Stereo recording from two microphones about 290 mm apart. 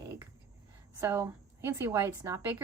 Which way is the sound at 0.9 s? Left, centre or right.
Centre.